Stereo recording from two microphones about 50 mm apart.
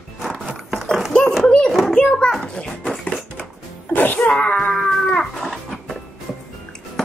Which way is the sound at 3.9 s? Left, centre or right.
Left.